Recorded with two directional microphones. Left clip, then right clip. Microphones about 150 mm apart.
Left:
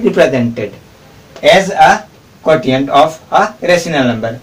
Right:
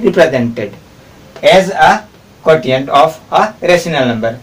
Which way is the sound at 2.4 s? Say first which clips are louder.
Right 1 dB; 20° right (ahead or behind).